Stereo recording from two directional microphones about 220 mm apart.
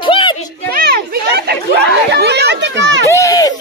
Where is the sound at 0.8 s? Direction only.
45° right (ahead or behind).